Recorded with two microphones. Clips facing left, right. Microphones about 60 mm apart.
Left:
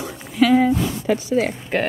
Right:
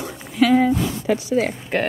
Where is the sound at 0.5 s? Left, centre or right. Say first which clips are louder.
Even; right.